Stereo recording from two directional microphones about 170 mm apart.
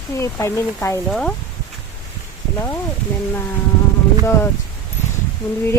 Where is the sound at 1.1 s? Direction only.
5° left (ahead or behind).